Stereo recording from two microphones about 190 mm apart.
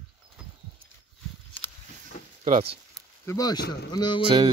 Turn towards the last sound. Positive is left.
turn(degrees=-25)  # may be behind; listen again after turning